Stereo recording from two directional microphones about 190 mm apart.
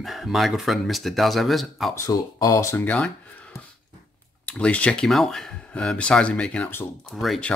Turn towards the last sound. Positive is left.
turn(degrees=5)  # may be behind; listen again after turning